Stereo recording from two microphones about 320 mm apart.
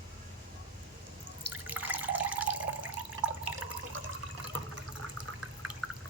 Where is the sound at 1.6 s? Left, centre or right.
Centre.